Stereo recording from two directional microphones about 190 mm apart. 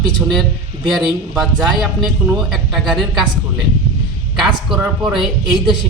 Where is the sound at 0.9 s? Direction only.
Centre (ahead or behind).